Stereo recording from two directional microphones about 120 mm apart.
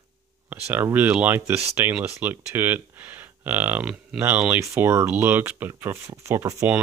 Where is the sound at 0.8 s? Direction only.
15° right (ahead or behind).